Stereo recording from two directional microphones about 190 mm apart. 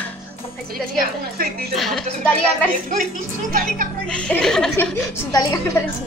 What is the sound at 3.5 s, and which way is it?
Speech, 45° right (ahead or behind).